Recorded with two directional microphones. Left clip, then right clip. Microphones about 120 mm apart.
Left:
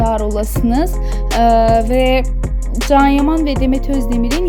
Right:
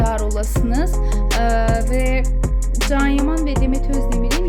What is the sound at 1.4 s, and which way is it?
Music, 30° left (ahead or behind).